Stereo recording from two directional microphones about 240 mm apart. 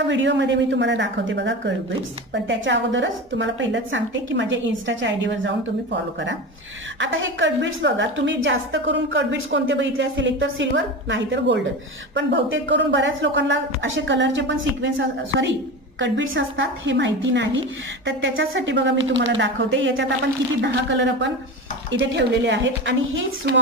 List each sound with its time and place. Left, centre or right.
0.1 s a woman's voice: right
7.0 s a woman's voice: right